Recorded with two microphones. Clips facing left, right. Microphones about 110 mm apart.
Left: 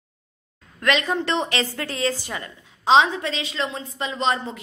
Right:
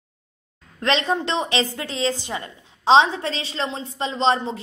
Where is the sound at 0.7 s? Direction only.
30° right (ahead or behind).